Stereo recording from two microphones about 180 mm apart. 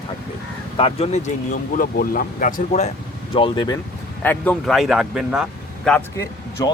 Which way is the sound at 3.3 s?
30° left (ahead or behind).